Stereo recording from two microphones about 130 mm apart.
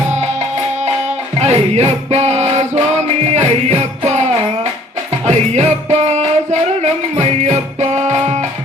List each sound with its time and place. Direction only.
0.1 s music: 60° right (ahead or behind)